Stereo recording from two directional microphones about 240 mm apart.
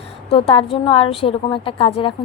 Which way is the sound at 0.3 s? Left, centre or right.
Left.